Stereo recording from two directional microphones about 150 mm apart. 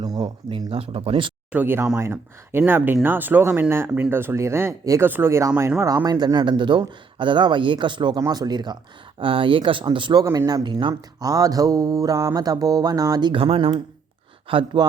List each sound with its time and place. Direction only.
0.0 s a man's voice: 30° right (ahead or behind)
1.5 s a man's voice: 15° right (ahead or behind); by 14.8 s 35° right (ahead or behind)